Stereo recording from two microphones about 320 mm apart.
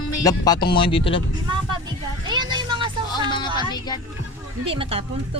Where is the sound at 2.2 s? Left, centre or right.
Centre.